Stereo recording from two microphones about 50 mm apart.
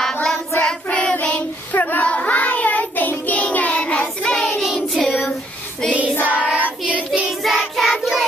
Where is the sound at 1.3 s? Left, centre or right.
Left.